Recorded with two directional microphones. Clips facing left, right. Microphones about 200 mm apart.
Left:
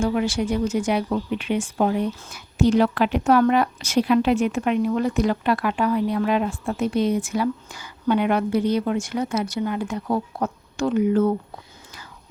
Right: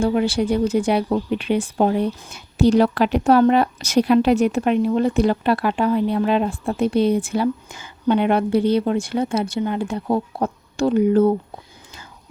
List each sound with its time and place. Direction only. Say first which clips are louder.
0.0 s speech: right 3 dB; 35° right (ahead or behind)